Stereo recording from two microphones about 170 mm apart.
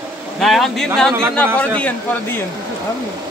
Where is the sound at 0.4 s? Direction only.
Centre (ahead or behind).